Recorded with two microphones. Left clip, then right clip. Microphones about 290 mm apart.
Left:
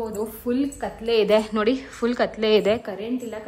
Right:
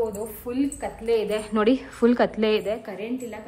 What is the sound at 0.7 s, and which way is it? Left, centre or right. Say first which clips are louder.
Speech: left 1 dB; centre.